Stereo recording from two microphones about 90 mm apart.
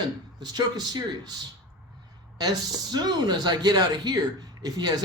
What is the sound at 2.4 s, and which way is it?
Speech, 50° right (ahead or behind).